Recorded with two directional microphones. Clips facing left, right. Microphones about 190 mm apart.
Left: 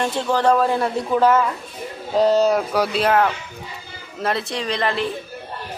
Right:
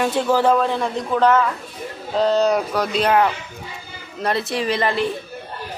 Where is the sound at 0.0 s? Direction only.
5° right (ahead or behind).